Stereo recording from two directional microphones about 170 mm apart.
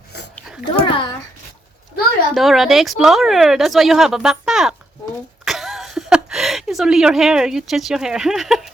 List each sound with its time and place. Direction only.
0.9 s a child's voice: 30° left (ahead or behind)
2.3 s a woman's voice: centre (ahead or behind)